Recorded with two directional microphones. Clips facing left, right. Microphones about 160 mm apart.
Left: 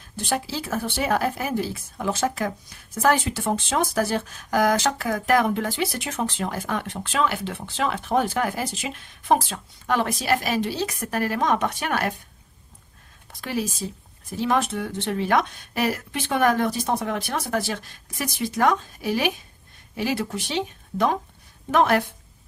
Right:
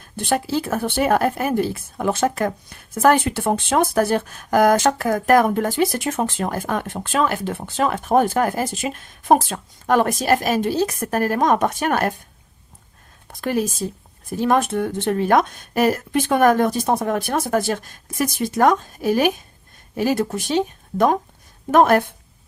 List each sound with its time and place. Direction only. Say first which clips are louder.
0.2 s speech: right 6 dB; 55° right (ahead or behind)
13.2 s speech: right 6 dB; 50° right (ahead or behind)